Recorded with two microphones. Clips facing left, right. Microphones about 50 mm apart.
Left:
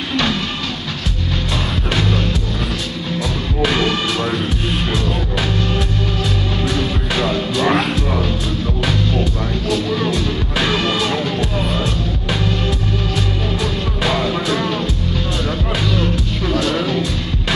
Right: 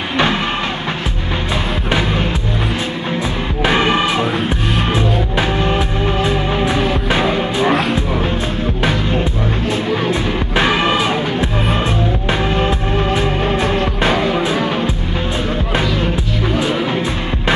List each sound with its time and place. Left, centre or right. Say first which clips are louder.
0.1 s music: right 3 dB; right
1.5 s music: right 3 dB; right
3.6 s music: right 4 dB; right
9.7 s music: even; right
14.0 s music: right 1 dB; right